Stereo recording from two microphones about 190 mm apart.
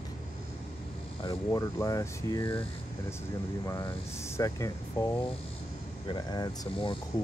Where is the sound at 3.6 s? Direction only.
15° left (ahead or behind).